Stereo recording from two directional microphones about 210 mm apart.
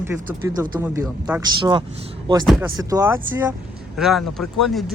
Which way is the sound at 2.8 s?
15° right (ahead or behind).